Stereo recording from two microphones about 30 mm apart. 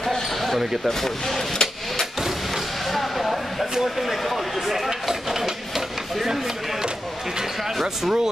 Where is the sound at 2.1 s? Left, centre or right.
Centre.